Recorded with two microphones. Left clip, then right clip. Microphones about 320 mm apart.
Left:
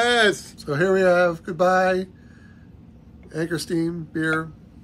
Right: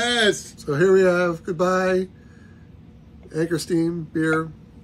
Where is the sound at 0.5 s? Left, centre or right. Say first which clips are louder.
Right 3 dB; centre.